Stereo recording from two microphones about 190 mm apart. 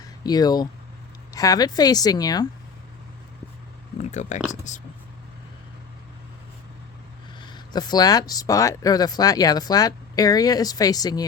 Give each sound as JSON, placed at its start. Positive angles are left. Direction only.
{"t": 0.0, "sound": "speech", "side_deg": 20}
{"t": 4.0, "sound": "speech", "side_deg": 40}
{"t": 7.3, "sound": "speech", "side_deg": 25}